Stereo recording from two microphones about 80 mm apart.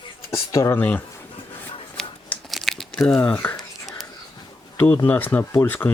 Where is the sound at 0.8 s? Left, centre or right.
Left.